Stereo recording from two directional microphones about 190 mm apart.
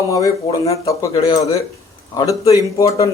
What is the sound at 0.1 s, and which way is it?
Speech, 20° left (ahead or behind).